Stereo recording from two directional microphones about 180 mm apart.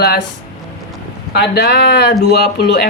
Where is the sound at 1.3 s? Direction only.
65° left (ahead or behind).